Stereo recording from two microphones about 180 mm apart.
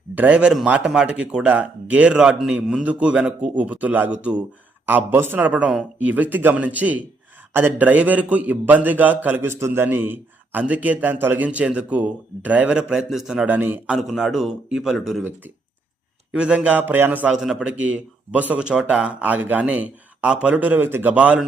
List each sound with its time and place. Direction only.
0.1 s a man's voice: 10° right (ahead or behind)
16.3 s a man's voice: 5° right (ahead or behind)